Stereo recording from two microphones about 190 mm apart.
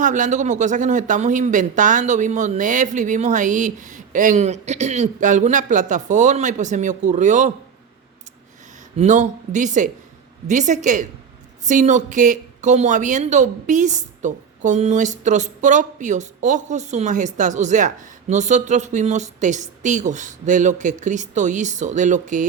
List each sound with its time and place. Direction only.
0.0 s speech: 40° right (ahead or behind)
9.0 s speech: 40° right (ahead or behind)